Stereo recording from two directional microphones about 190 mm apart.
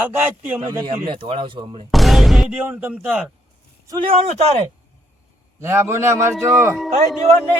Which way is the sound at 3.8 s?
25° right (ahead or behind).